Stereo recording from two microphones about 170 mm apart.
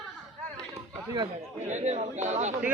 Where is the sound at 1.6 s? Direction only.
40° right (ahead or behind).